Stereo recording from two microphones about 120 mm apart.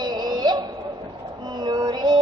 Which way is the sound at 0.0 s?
35° right (ahead or behind).